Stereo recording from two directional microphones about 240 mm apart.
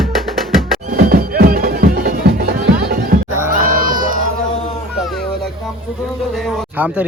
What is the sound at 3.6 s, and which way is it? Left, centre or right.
Run, right.